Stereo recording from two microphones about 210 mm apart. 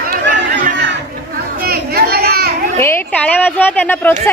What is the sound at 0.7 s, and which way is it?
Chatter, 55° right (ahead or behind).